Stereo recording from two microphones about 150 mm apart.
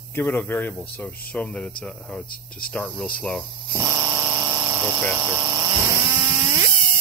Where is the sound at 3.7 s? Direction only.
20° right (ahead or behind).